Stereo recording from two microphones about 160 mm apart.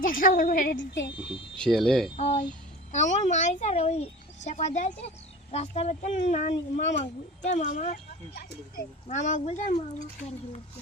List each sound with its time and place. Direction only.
0.0 s a woman's voice: 60° left (ahead or behind); by 1.1 s 80° left
1.5 s speech: 5° left (ahead or behind)
2.1 s speech: 45° left (ahead or behind)
9.0 s speech: 45° left (ahead or behind)